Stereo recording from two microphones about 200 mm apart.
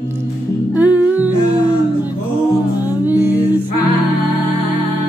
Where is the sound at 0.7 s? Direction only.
10° right (ahead or behind).